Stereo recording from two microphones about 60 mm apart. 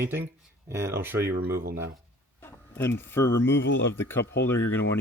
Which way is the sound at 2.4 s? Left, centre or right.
Left.